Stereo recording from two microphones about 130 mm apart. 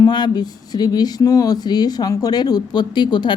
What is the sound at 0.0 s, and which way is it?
A woman's voice, 35° left (ahead or behind).